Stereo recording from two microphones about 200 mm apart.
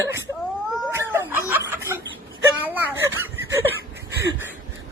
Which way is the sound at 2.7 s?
10° right (ahead or behind).